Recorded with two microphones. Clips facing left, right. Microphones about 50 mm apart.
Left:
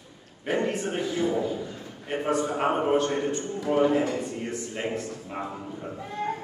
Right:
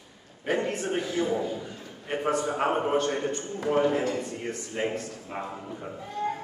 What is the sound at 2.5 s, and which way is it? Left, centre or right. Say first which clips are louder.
A man's voice: left 1 dB; centre.